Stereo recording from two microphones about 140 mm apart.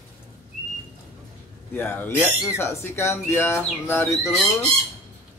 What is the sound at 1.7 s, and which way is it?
Speech, 15° left (ahead or behind).